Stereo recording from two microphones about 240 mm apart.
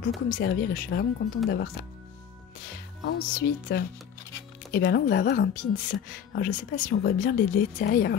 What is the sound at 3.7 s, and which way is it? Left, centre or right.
A woman's voice, left.